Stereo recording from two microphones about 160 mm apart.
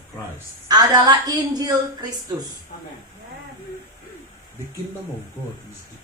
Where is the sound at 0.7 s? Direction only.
25° right (ahead or behind).